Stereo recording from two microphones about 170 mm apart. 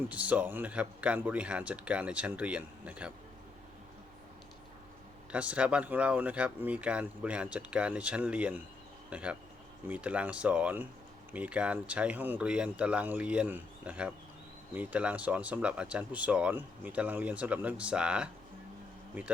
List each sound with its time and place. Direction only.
0.1 s speech: 10° right (ahead or behind)
5.3 s speech: 5° right (ahead or behind)